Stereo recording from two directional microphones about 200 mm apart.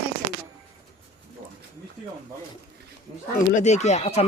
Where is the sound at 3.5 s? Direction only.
35° left (ahead or behind).